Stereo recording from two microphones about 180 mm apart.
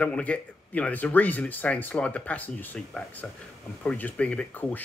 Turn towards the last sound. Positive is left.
turn(degrees=10)  # may be behind; listen again after turning